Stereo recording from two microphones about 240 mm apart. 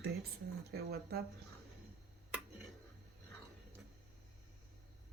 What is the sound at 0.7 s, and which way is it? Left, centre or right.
Speech, right.